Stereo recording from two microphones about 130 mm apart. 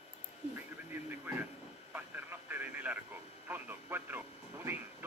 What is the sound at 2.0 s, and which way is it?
Radio, 10° right (ahead or behind).